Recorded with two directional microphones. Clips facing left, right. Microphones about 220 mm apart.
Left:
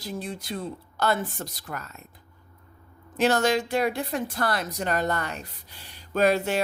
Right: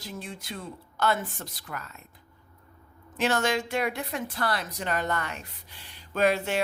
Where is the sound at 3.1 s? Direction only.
40° left (ahead or behind).